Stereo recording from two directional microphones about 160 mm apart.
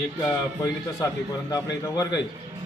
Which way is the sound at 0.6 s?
20° left (ahead or behind).